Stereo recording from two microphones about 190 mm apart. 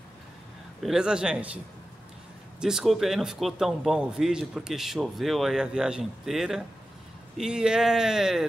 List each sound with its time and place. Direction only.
0.8 s a man's voice: 5° right (ahead or behind)
2.6 s a man's voice: centre (ahead or behind)